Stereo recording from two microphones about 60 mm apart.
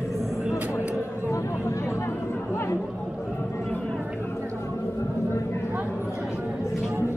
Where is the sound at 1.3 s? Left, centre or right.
Left.